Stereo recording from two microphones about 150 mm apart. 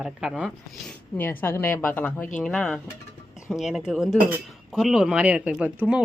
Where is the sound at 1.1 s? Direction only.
15° left (ahead or behind).